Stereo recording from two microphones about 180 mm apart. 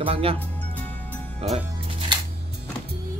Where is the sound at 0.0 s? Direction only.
30° right (ahead or behind).